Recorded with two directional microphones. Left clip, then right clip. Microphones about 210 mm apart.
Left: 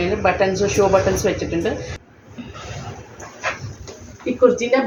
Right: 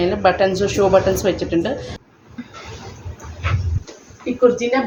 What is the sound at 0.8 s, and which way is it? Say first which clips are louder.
Speech: even; 80° right.